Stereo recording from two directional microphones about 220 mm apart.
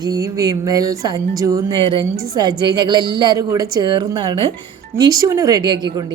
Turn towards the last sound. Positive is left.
turn(degrees=-15)  # may be behind; listen again after turning